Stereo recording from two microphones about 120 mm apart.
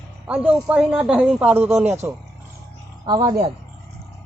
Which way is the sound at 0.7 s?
10° right (ahead or behind).